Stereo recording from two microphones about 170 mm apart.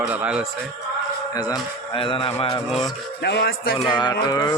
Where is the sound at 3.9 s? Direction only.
25° left (ahead or behind).